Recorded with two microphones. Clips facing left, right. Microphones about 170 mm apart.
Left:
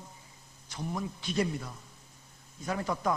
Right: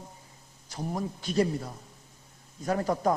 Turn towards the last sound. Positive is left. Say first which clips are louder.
# right 5 dB
turn(degrees=-40)  # may be behind; listen again after turning